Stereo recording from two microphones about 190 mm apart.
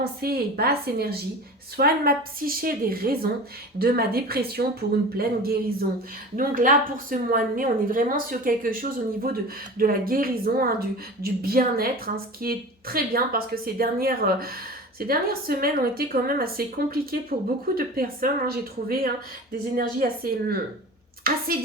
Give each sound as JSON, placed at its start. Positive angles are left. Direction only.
{"t": 0.0, "sound": "a woman's voice", "side_deg": -55}